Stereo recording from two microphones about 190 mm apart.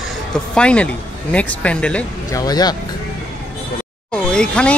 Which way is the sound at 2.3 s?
20° left (ahead or behind).